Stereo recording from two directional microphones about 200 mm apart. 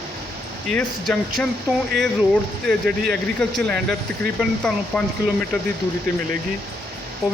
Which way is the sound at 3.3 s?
5° left (ahead or behind).